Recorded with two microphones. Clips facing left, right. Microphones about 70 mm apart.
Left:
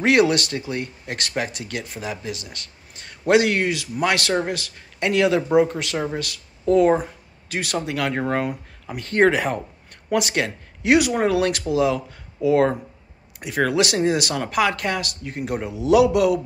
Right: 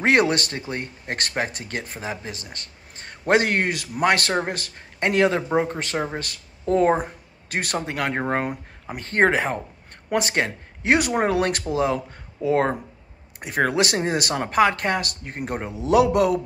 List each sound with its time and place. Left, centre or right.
0.0 s speech: right
7.0 s speech: right
7.9 s speech: right